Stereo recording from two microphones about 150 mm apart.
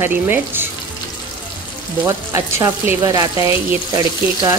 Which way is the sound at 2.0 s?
20° right (ahead or behind).